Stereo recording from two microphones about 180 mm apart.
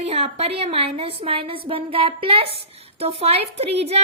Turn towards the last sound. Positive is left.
turn(degrees=-35)  # may be behind; listen again after turning